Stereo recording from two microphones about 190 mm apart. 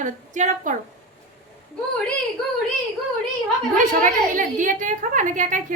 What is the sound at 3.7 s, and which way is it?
A woman's voice, 45° right (ahead or behind).